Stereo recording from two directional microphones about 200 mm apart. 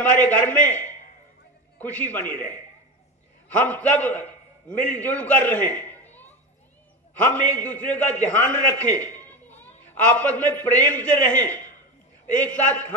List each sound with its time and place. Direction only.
0.0 s a man's voice: 10° left (ahead or behind)
7.3 s a man's voice: 10° left (ahead or behind)